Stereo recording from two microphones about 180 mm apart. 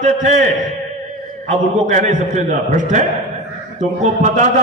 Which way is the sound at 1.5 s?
45° right (ahead or behind).